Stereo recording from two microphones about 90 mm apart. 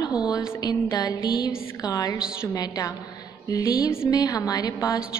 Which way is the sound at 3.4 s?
40° left (ahead or behind).